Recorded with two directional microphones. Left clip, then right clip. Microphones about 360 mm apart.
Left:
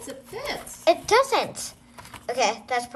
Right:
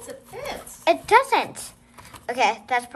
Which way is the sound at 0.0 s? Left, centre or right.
Centre.